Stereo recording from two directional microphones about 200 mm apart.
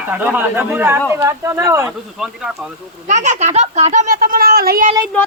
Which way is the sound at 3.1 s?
35° right (ahead or behind).